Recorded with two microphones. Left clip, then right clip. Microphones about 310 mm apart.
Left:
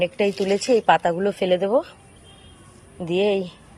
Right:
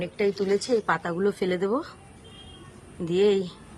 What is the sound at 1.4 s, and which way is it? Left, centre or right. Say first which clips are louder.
Speech: left 7 dB; left.